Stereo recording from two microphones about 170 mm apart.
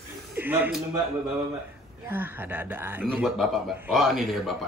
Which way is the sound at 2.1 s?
10° right (ahead or behind).